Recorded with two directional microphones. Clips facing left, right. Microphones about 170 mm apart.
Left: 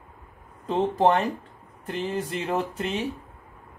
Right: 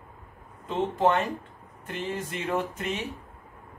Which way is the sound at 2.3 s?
30° left (ahead or behind).